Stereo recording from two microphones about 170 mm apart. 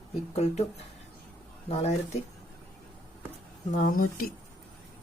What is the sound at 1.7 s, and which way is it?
Speech, 40° left (ahead or behind).